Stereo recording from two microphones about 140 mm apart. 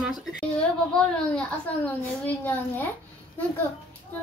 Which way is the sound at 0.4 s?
5° left (ahead or behind).